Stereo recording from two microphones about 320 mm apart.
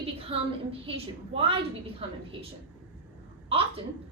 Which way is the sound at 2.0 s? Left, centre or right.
Centre.